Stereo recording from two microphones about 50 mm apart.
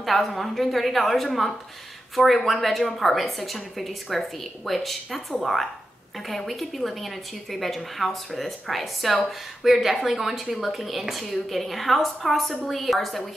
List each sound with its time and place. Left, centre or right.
0.0 s a woman's voice: centre